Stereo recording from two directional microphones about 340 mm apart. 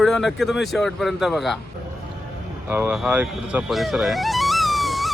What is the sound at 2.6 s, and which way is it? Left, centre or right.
Music, centre.